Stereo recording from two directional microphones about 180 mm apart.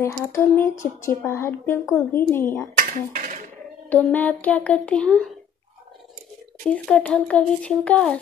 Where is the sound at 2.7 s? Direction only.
50° right (ahead or behind).